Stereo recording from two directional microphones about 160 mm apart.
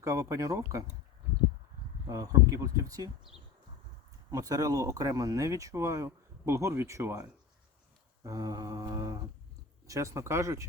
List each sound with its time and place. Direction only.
0.0 s speech: 20° right (ahead or behind)
2.0 s speech: 20° right (ahead or behind)
4.3 s speech: 20° right (ahead or behind)